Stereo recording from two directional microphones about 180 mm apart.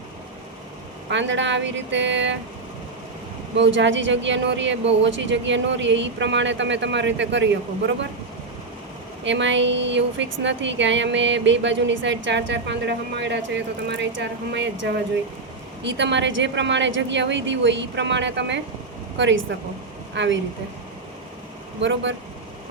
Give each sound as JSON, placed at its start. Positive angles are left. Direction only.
{"t": 1.1, "sound": "a woman's voice", "side_deg": -90}
{"t": 3.6, "sound": "a woman's voice", "side_deg": -90}
{"t": 9.2, "sound": "a woman's voice", "side_deg": -85}
{"t": 21.8, "sound": "speech", "side_deg": -90}